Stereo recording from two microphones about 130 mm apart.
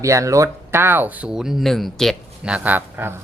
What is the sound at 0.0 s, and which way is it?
Speech, 25° right (ahead or behind).